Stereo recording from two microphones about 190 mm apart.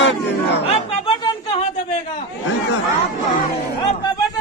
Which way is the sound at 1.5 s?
30° left (ahead or behind).